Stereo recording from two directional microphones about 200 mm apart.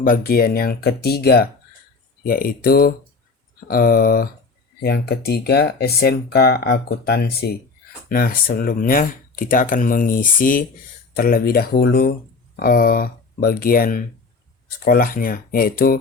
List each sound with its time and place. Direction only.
0.0 s speech: 45° left (ahead or behind)